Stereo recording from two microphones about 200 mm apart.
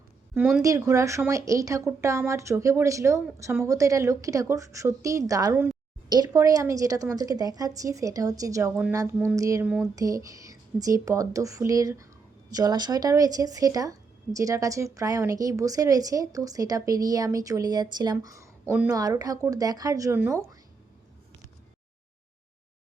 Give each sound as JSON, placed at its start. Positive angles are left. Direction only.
{"t": 0.3, "sound": "speech", "side_deg": 0}
{"t": 0.6, "sound": "speech", "side_deg": -15}